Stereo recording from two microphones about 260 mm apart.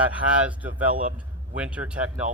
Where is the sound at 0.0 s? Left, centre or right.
Centre.